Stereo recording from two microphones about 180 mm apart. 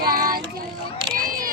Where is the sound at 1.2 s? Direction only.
50° right (ahead or behind).